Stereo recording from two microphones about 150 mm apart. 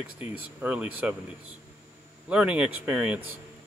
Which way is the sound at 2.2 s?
10° right (ahead or behind).